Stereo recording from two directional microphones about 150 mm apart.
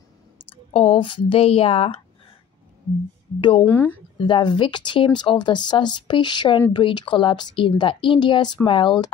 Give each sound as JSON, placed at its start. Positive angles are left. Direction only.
{"t": 0.5, "sound": "speech", "side_deg": 40}
{"t": 3.3, "sound": "speech", "side_deg": 30}
{"t": 3.6, "sound": "speech", "side_deg": 15}
{"t": 4.2, "sound": "speech", "side_deg": 30}